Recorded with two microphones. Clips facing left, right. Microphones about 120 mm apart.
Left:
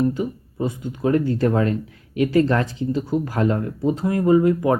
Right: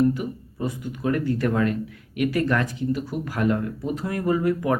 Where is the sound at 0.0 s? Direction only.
25° left (ahead or behind).